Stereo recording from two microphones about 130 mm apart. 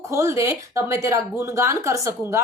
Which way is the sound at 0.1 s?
20° right (ahead or behind).